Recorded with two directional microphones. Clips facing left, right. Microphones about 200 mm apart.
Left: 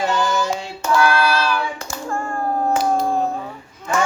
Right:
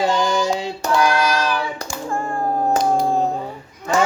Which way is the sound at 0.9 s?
15° right (ahead or behind).